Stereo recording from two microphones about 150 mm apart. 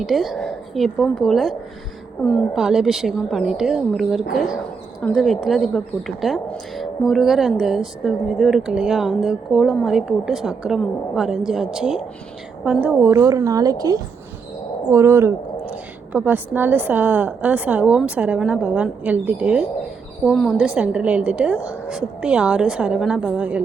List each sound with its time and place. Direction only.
0.0 s a woman's voice: centre (ahead or behind)
13.0 s a woman's voice: 20° right (ahead or behind)